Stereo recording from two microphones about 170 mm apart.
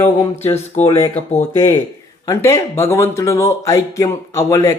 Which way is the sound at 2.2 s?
20° left (ahead or behind).